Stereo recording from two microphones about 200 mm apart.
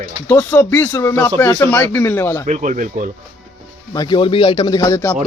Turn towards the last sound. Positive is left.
turn(degrees=15)  # may be behind; listen again after turning